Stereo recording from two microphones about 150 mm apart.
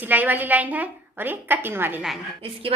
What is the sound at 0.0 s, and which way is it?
A woman's voice, 10° right (ahead or behind).